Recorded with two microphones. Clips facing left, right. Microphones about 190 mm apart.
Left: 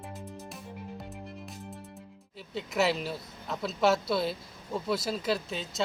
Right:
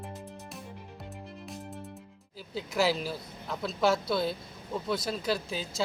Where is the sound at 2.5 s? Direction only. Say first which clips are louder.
Even; centre (ahead or behind).